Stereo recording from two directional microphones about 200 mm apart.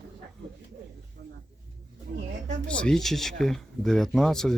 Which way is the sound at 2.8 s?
5° left (ahead or behind).